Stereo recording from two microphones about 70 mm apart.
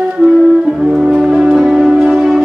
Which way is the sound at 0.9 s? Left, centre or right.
Centre.